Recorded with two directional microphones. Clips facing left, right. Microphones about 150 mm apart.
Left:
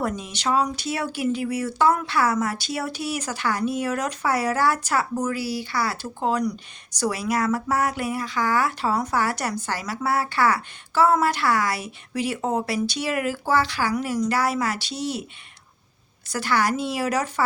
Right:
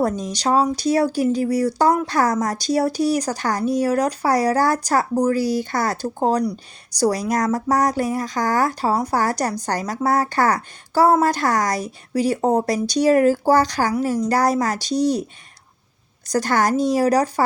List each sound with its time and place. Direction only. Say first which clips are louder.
0.0 s speech: right 6 dB; 40° right (ahead or behind)
16.3 s speech: right 5 dB; 45° right (ahead or behind)